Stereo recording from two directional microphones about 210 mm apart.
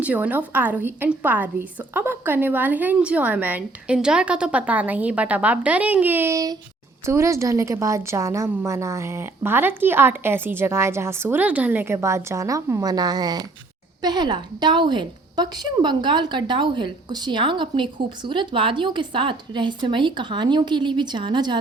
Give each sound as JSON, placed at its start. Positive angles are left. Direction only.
{"t": 0.0, "sound": "a woman's voice", "side_deg": -5}